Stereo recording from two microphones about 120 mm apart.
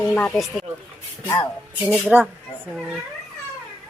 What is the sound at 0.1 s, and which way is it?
Speech, 15° left (ahead or behind).